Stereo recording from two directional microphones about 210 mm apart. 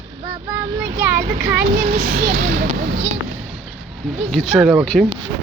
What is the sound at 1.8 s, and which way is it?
Speech, 45° right (ahead or behind).